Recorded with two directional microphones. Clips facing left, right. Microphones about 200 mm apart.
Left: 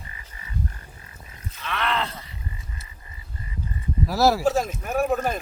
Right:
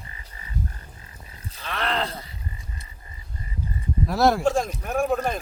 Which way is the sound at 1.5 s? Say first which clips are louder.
Left 1 dB; 35° right (ahead or behind).